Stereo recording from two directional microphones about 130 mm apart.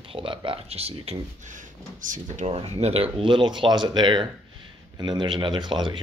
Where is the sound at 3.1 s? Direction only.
40° right (ahead or behind).